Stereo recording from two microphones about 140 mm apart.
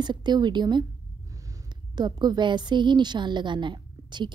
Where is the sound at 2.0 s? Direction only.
30° right (ahead or behind).